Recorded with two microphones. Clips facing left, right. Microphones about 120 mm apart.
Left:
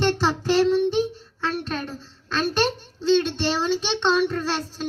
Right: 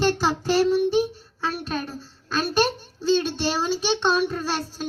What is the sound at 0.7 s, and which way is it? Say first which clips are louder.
Child singing: even; 10° right (ahead or behind).